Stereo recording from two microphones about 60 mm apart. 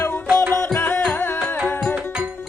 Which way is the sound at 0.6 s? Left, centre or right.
Left.